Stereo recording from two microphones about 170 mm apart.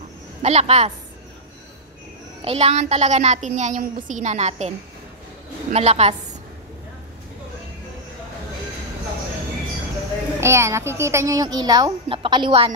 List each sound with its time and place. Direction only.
0.4 s a woman's voice: 40° right (ahead or behind)
2.4 s a woman's voice: 35° right (ahead or behind)
10.4 s a child's voice: 15° right (ahead or behind)